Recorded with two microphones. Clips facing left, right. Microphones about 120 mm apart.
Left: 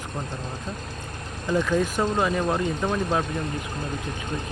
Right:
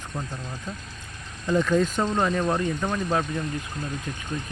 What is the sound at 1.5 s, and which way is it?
Speech, 10° left (ahead or behind).